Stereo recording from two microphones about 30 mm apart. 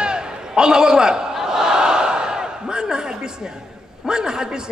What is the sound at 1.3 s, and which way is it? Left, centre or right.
Battle cry, centre.